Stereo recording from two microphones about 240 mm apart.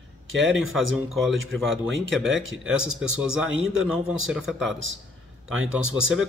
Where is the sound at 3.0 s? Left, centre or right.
Centre.